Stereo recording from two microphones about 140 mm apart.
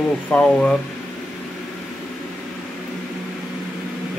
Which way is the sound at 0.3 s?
5° left (ahead or behind).